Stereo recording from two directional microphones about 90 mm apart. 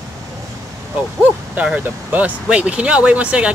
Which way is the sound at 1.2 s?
20° right (ahead or behind).